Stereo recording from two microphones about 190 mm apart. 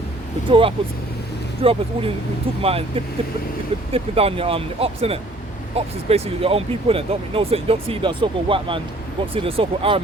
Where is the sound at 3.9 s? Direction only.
30° right (ahead or behind).